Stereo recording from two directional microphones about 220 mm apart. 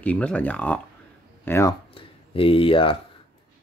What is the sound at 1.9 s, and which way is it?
Speech, 25° left (ahead or behind).